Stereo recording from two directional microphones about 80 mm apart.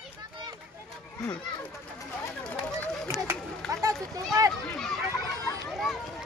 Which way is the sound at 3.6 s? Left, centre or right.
Centre.